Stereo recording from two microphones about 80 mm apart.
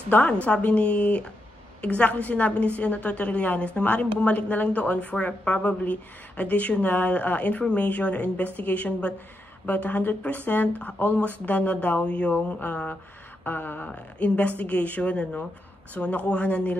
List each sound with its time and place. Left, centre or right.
0.1 s a woman's voice: centre
13.4 s a sound: left
13.8 s a woman's voice: centre